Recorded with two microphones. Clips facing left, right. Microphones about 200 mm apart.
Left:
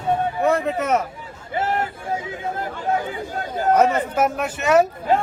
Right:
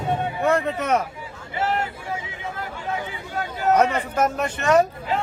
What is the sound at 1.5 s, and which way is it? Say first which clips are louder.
Vehicle: left 2 dB; 50° left (ahead or behind).